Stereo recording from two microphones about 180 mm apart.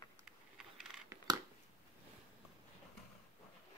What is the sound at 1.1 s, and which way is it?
Crushing, 15° right (ahead or behind).